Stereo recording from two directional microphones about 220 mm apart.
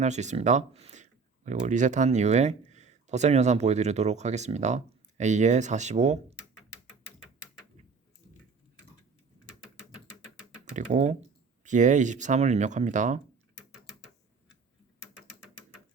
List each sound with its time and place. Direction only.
0.0 s speech: 30° right (ahead or behind)
10.8 s speech: 35° right (ahead or behind)